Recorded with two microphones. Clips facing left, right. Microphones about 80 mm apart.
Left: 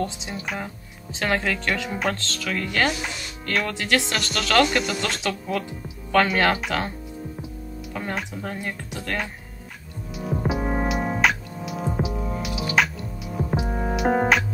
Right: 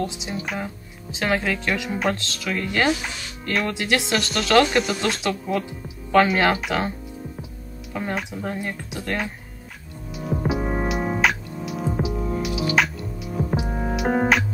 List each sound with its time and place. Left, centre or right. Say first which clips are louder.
0.0 s speech: right 1 dB; centre
4.2 s speech: right 4 dB; centre
7.9 s speech: right 3 dB; centre
10.1 s music: right 1 dB; centre